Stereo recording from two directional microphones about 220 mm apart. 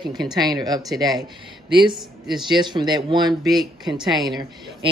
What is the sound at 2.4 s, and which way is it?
Speech, 20° right (ahead or behind).